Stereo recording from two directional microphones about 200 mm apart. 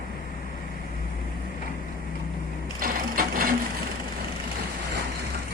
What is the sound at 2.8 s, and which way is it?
Sewing machine, 45° right (ahead or behind).